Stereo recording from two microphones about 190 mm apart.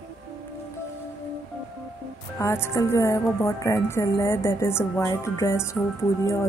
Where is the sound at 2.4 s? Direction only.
15° left (ahead or behind).